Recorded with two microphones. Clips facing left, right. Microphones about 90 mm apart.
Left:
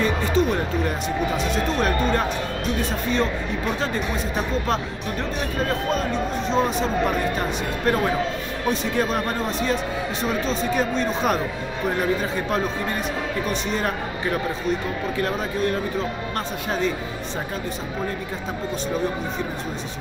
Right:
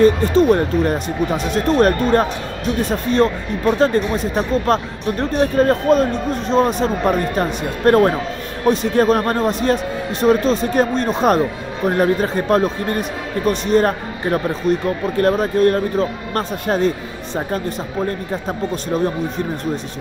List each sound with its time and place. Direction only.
0.0 s speech: 50° right (ahead or behind)